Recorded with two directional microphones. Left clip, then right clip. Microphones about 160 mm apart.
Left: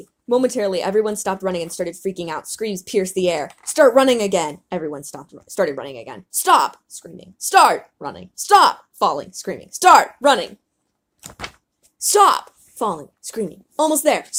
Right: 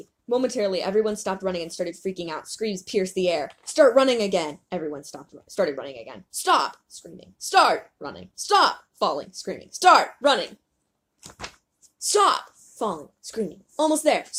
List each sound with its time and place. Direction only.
0.0 s a woman's voice: 50° left (ahead or behind)